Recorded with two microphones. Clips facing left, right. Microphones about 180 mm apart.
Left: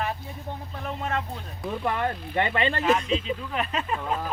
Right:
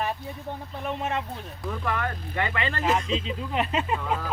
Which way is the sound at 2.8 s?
25° right (ahead or behind).